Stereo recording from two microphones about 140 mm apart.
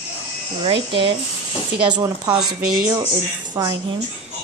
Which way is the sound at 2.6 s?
90° right.